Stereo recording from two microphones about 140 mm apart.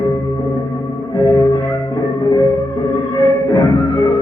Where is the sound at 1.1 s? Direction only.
25° left (ahead or behind).